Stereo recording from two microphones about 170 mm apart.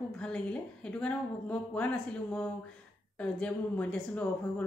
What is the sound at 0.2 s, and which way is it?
A woman's voice, 5° left (ahead or behind).